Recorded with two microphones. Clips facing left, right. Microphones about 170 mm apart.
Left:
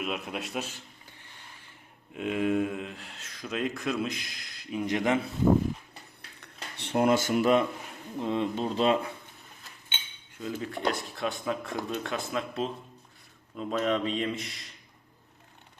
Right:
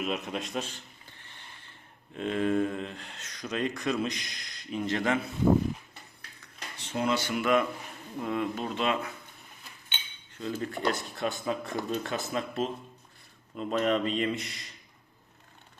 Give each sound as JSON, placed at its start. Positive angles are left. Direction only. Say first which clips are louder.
{"t": 0.0, "sound": "speech", "louder": "right 1 dB", "side_deg": 5}
{"t": 2.1, "sound": "speech", "louder": "even", "side_deg": 10}
{"t": 6.7, "sound": "speech", "louder": "left 5 dB", "side_deg": 60}
{"t": 8.2, "sound": "speech", "louder": "left 2 dB", "side_deg": 25}
{"t": 10.3, "sound": "speech", "louder": "right 1 dB", "side_deg": 5}